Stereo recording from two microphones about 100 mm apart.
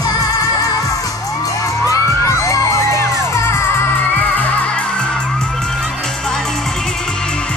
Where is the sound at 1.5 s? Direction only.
35° left (ahead or behind).